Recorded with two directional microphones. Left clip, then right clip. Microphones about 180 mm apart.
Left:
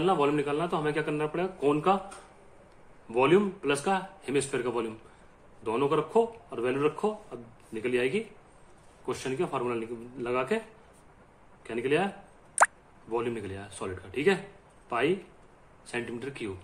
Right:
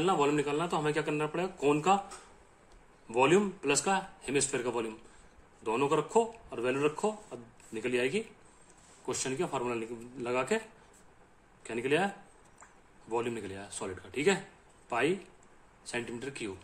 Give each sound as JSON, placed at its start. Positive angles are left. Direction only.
{"t": 0.0, "sound": "speech", "side_deg": -15}
{"t": 3.1, "sound": "speech", "side_deg": -20}
{"t": 11.6, "sound": "speech", "side_deg": -20}
{"t": 13.1, "sound": "speech", "side_deg": -20}